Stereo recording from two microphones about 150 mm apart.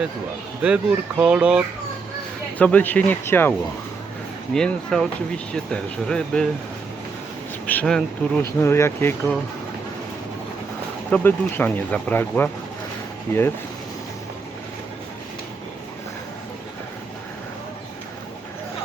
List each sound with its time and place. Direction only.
0.6 s speech: 5° right (ahead or behind)
2.6 s speech: 10° left (ahead or behind)
4.5 s speech: 5° left (ahead or behind)
7.7 s speech: 5° left (ahead or behind)
8.5 s speech: 15° left (ahead or behind)
11.1 s speech: 15° left (ahead or behind)